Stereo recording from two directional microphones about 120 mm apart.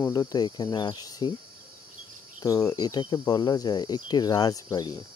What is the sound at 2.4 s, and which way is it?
Speech, 30° left (ahead or behind).